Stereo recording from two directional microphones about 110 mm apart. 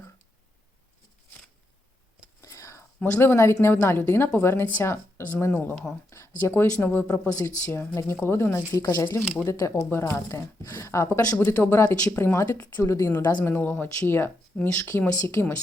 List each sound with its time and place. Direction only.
2.4 s a woman's voice: 30° left (ahead or behind); by 6.0 s 5° left (ahead or behind)
6.1 s speech: 25° left (ahead or behind)
13.4 s speech: 20° left (ahead or behind)